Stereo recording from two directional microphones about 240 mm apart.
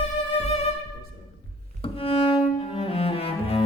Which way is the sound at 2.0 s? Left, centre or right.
Left.